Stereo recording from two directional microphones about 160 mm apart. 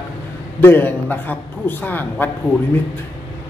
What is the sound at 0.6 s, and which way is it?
A woman's voice, 15° left (ahead or behind).